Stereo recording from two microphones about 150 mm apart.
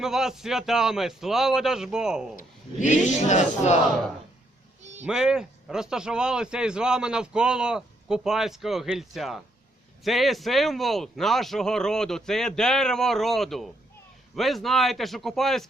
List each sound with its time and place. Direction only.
0.0 s speech: 5° right (ahead or behind)
2.3 s speech: 60° left (ahead or behind)
4.8 s a sound: 50° right (ahead or behind)
5.0 s speech: 5° right (ahead or behind)